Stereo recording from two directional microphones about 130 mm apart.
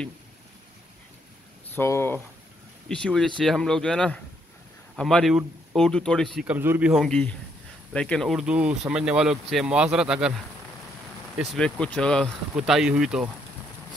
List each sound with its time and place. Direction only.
1.8 s speech: 20° left (ahead or behind)
2.9 s speech: 5° left (ahead or behind)
6.4 s speech: 15° right (ahead or behind)
6.9 s speech: centre (ahead or behind)
11.5 s speech: 5° left (ahead or behind)
12.5 s speech: 5° right (ahead or behind)